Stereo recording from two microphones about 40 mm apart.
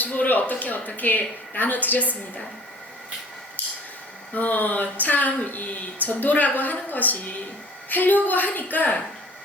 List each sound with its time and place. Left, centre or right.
0.0 s a woman's voice: left
3.6 s a sound: left
4.4 s speech: left